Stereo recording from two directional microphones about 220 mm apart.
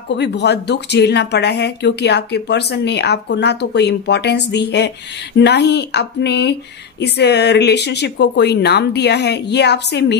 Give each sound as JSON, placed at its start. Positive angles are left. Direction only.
{"t": 0.1, "sound": "speech", "side_deg": 50}